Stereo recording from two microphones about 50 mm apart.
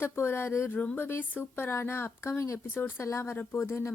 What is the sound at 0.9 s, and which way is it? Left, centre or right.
Speech, left.